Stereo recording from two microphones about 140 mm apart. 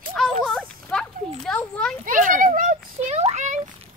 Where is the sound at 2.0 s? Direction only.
70° right (ahead or behind).